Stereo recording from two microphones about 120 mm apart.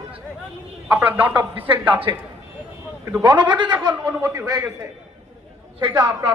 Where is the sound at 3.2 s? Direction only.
40° right (ahead or behind).